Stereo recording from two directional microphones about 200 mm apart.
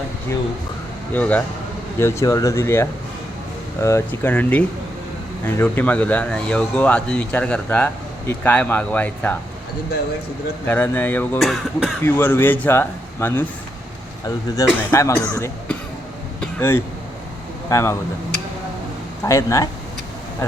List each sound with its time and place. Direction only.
1.1 s speech: 10° left (ahead or behind)
10.7 s speech: 10° left (ahead or behind)
12.0 s speech: 10° left (ahead or behind)
16.4 s a sound: 10° left (ahead or behind)
17.7 s speech: 15° left (ahead or behind)
19.2 s speech: 15° left (ahead or behind)